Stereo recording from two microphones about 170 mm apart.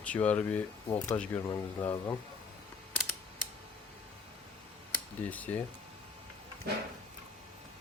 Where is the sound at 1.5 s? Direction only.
20° left (ahead or behind).